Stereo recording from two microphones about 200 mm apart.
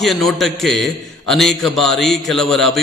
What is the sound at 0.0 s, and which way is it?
A man's voice, centre (ahead or behind).